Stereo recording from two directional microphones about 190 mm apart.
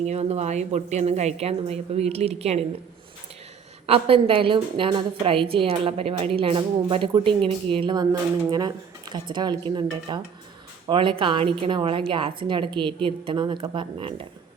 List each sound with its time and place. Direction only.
0.0 s a woman's voice: 35° right (ahead or behind)
3.8 s a woman's voice: 30° right (ahead or behind)